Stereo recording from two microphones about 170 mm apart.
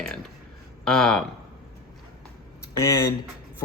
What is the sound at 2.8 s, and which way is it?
Speech, 15° left (ahead or behind).